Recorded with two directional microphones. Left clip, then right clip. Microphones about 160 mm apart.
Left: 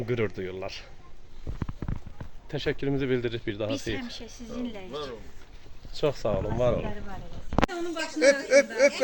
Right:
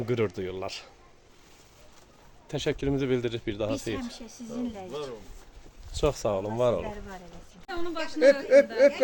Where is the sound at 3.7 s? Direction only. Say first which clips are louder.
Left 1 dB; 90° right.